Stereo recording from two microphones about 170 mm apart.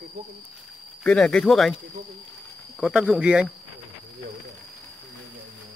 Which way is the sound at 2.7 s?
5° right (ahead or behind).